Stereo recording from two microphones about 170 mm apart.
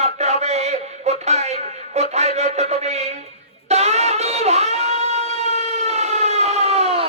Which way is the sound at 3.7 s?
40° right (ahead or behind).